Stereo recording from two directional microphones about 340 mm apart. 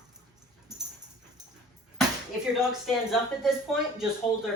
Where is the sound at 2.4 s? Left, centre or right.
Centre.